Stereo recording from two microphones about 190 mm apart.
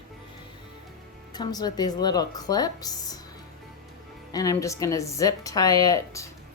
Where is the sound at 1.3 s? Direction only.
20° left (ahead or behind).